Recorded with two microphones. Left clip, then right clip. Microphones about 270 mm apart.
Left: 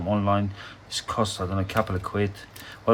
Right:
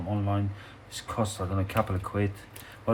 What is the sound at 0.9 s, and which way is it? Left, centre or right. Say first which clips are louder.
Speech: left 5 dB; centre.